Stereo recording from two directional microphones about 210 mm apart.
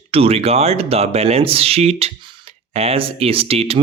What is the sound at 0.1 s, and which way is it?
Speech, 30° right (ahead or behind).